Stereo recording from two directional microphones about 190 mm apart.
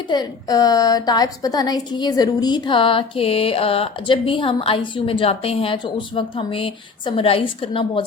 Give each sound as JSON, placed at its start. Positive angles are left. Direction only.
{"t": 0.1, "sound": "a woman's voice", "side_deg": 20}